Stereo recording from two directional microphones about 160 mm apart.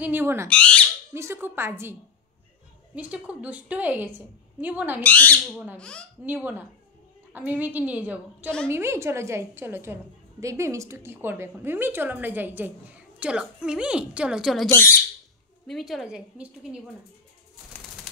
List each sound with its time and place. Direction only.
0.0 s a woman's voice: 15° right (ahead or behind)
0.5 s bird: 5° left (ahead or behind)
1.1 s a woman's voice: 15° right (ahead or behind)
3.0 s a woman's voice: 10° right (ahead or behind)
5.0 s bird: 10° left (ahead or behind)
5.8 s a woman's voice: 5° left (ahead or behind)
6.2 s a woman's voice: 10° right (ahead or behind)